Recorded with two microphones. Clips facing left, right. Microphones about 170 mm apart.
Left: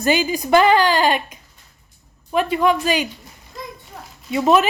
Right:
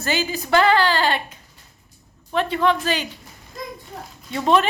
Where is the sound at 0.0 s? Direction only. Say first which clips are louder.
Left 5 dB; 15° left (ahead or behind).